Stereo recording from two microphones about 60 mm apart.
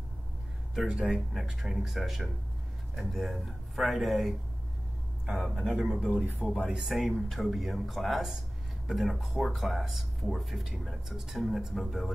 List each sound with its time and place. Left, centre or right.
0.7 s speech: centre
6.2 s speech: right
6.7 s speech: centre